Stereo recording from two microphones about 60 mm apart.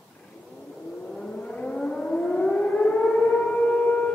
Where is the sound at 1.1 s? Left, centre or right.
Centre.